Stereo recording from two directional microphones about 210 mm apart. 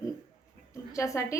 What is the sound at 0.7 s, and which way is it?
Speech, 15° left (ahead or behind).